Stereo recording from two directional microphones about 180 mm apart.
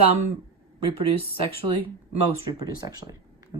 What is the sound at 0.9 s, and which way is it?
Speech, 30° right (ahead or behind).